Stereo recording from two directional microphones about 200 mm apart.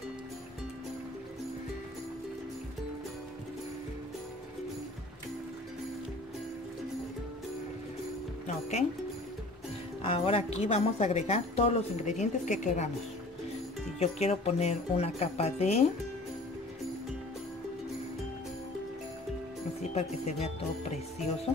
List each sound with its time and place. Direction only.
8.5 s speech: 35° left (ahead or behind)
10.0 s speech: 30° left (ahead or behind)
13.9 s speech: 35° left (ahead or behind)
19.8 s speech: 35° left (ahead or behind)